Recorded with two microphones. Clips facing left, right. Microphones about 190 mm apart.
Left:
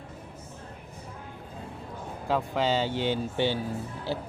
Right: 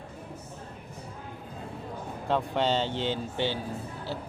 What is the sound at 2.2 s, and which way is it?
Speech, 5° left (ahead or behind).